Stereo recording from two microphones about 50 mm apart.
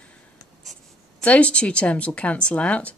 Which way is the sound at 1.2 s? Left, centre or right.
Left.